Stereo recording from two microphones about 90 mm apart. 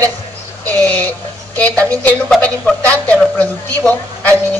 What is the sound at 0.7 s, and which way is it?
A woman's voice, 15° left (ahead or behind).